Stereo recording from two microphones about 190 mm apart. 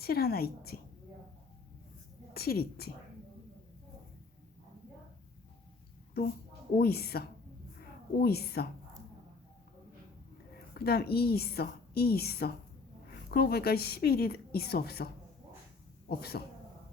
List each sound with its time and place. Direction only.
0.0 s a woman's voice: 55° left (ahead or behind)
2.3 s a woman's voice: 55° left (ahead or behind)
6.7 s a woman's voice: 55° left (ahead or behind)
10.8 s a woman's voice: 55° left (ahead or behind)